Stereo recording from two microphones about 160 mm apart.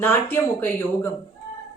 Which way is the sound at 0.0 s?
15° left (ahead or behind).